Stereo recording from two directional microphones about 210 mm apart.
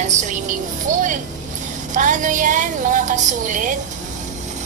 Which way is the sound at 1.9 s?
35° right (ahead or behind).